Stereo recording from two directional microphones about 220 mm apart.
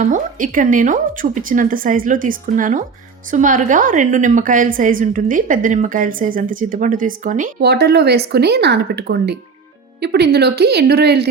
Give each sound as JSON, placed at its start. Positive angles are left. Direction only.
{"t": 0.0, "sound": "a woman's voice", "side_deg": -35}